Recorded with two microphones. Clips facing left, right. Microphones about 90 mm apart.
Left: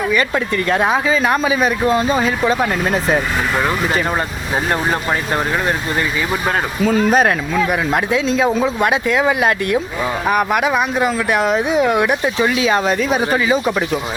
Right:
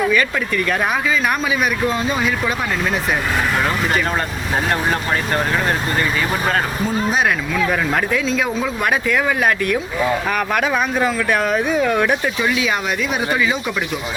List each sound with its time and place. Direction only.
0.1 s speech: 25° left (ahead or behind)
4.7 s speech: 10° left (ahead or behind)
7.1 s speech: 40° left (ahead or behind)
8.6 s speech: 25° left (ahead or behind)
12.4 s speech: 35° left (ahead or behind)